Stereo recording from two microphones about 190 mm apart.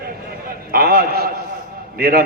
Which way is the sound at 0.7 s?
50° right (ahead or behind).